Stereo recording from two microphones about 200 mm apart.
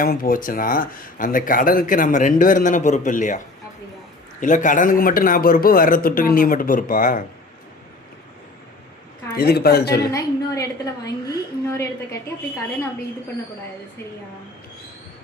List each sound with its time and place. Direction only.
0.0 s speech: 45° left (ahead or behind)
9.3 s speech: 50° left (ahead or behind)
10.1 s a woman's voice: 15° left (ahead or behind)